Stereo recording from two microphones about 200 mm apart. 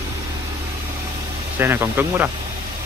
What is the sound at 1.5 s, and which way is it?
Speech, 10° right (ahead or behind).